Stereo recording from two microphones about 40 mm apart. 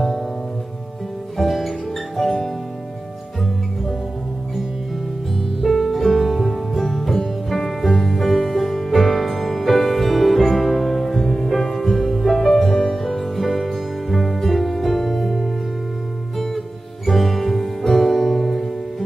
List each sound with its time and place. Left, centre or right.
1.4 s music: centre
5.6 s music: centre